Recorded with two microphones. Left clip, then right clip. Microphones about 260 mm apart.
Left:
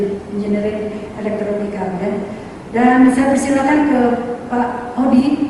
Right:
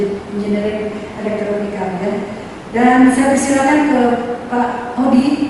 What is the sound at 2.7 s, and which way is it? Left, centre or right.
A woman's voice, centre.